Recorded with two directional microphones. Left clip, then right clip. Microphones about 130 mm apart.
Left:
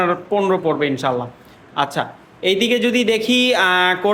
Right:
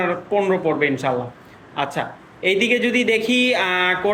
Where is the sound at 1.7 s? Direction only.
50° left (ahead or behind).